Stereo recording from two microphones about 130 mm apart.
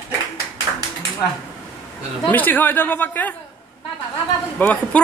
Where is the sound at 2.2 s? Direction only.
15° left (ahead or behind).